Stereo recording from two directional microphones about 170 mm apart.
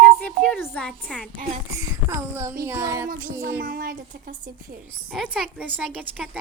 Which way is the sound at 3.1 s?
55° right (ahead or behind).